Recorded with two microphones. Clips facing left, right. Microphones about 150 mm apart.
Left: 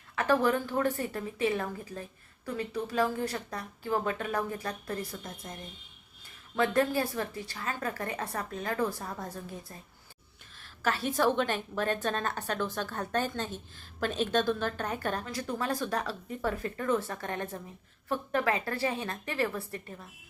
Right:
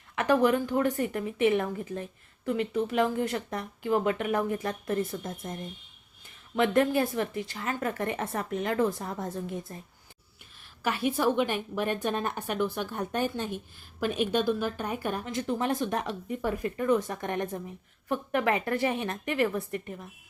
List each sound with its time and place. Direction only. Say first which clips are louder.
0.2 s a woman's voice: right 3 dB; 20° right (ahead or behind)
6.6 s a woman's voice: right 3 dB; 20° right (ahead or behind)
10.6 s a sound: right 2 dB; 15° right (ahead or behind)
11.2 s a woman's voice: even; 15° right (ahead or behind)